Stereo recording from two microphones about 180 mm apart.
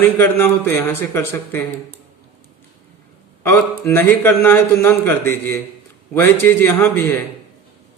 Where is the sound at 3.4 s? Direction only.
10° left (ahead or behind).